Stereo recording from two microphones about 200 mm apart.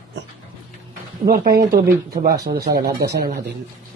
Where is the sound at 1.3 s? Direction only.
45° right (ahead or behind).